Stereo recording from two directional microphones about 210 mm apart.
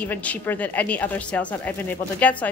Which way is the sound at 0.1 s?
10° left (ahead or behind).